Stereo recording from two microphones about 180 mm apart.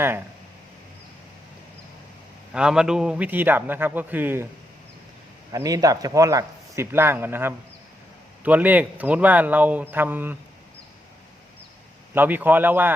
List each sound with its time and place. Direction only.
2.5 s a man's voice: 5° right (ahead or behind)
5.5 s a man's voice: 20° right (ahead or behind)
12.1 s a man's voice: 10° right (ahead or behind)